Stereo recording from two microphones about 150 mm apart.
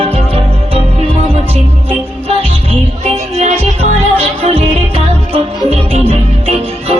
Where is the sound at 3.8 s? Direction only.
40° right (ahead or behind).